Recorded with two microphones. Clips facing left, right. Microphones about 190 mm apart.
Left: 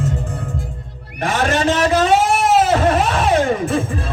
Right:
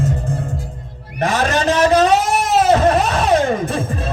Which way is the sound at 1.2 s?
40° right (ahead or behind).